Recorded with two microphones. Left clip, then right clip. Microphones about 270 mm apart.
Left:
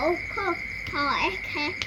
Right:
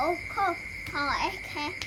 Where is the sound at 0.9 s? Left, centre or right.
Right.